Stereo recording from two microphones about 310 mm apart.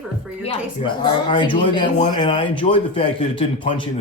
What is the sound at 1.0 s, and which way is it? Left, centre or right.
Speech, centre.